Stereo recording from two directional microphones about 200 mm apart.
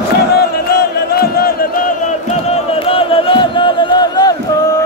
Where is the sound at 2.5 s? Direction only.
30° left (ahead or behind).